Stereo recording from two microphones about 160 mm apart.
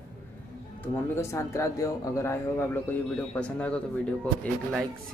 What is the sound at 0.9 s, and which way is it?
A man's voice, 15° left (ahead or behind).